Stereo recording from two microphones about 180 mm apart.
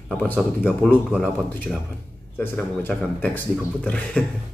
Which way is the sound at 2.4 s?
10° left (ahead or behind).